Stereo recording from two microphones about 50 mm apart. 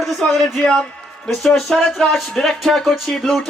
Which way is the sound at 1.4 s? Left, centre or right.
Centre.